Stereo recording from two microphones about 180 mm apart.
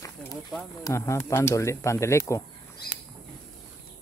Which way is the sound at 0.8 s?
15° left (ahead or behind).